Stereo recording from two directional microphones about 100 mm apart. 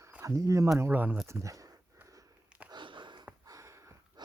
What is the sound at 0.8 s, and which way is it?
Speech, 20° right (ahead or behind).